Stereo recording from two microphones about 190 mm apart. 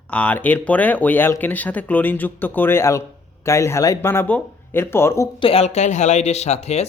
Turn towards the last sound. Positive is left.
turn(degrees=35)  # may be behind; listen again after turning